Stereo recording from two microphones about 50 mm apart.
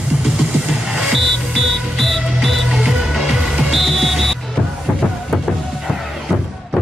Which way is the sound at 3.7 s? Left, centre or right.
Centre.